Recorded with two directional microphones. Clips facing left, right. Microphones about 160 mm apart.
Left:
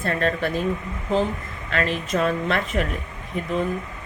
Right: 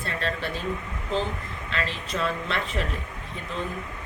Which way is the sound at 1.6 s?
50° left (ahead or behind).